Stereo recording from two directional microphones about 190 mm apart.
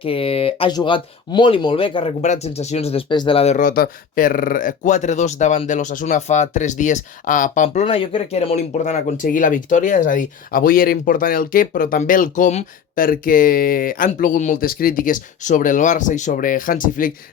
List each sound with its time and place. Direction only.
0.0 s speech: 30° left (ahead or behind); by 17.1 s 45° left (ahead or behind)